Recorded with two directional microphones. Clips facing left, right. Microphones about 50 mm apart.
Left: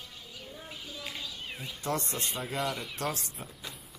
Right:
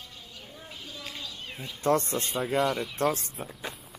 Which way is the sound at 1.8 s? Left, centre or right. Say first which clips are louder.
Right 8 dB; right.